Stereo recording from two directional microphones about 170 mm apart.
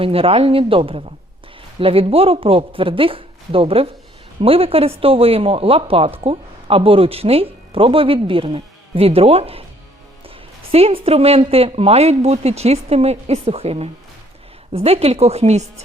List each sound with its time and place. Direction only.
0.0 s speech: 35° right (ahead or behind)